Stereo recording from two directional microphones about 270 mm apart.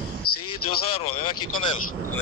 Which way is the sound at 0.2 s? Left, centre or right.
Left.